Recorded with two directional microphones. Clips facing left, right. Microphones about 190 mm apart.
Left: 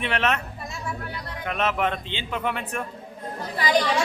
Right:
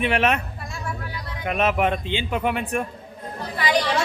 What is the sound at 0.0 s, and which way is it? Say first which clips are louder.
Speech: right 4 dB; 10° right (ahead or behind).